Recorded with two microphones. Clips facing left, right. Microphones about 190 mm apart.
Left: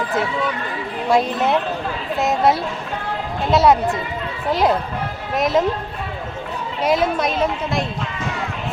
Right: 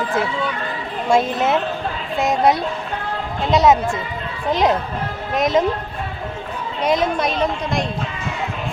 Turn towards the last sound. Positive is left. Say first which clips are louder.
# even
turn(degrees=5)  # may be behind; listen again after turning